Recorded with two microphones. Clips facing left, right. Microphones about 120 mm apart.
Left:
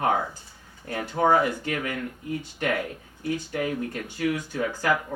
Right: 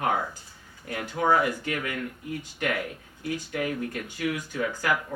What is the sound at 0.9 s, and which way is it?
Speech, 35° left (ahead or behind).